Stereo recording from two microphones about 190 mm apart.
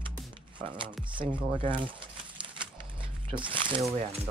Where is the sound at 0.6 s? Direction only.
25° right (ahead or behind).